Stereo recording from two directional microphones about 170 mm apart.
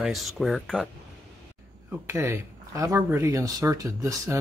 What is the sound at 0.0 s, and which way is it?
Speech, centre (ahead or behind).